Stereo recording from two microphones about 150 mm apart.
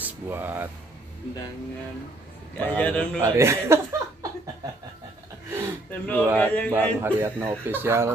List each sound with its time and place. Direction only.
0.0 s speech: 15° right (ahead or behind)
2.5 s a man's voice: 10° left (ahead or behind)
3.2 s speech: 15° right (ahead or behind)
5.5 s gasp: 20° right (ahead or behind)
5.9 s a man's voice: 10° left (ahead or behind)
7.0 s speech: 15° right (ahead or behind)